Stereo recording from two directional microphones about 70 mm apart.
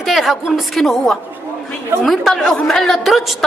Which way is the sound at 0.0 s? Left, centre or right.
Centre.